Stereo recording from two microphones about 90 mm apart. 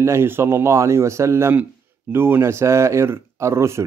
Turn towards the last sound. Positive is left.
turn(degrees=-30)  # may be behind; listen again after turning